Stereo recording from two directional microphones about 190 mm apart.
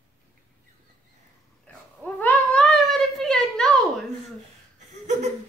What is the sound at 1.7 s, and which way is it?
Babbling, 10° left (ahead or behind).